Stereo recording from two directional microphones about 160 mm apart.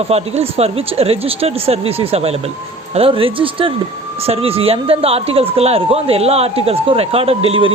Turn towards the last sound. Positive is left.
turn(degrees=-35)  # may be behind; listen again after turning